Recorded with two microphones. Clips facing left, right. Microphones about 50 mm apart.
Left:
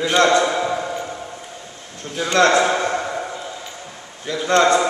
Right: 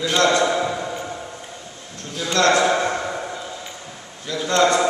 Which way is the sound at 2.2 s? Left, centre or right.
Left.